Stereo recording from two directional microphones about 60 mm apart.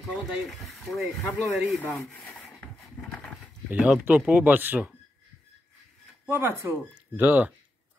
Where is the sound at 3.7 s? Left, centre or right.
Right.